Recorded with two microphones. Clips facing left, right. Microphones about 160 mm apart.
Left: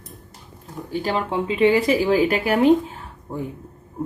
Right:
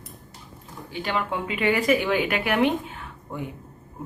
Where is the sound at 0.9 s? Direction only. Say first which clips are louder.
Left 4 dB; 35° left (ahead or behind).